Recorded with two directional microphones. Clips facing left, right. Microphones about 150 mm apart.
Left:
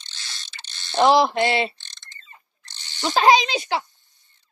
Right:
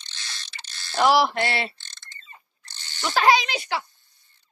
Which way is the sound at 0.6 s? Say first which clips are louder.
Left 3 dB; 25° left (ahead or behind).